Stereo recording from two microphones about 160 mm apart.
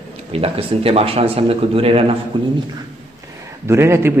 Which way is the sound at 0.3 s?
35° right (ahead or behind).